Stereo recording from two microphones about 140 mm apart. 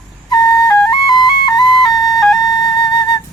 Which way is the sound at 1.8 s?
Centre (ahead or behind).